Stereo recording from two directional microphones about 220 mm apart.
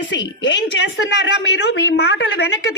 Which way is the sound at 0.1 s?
55° left (ahead or behind).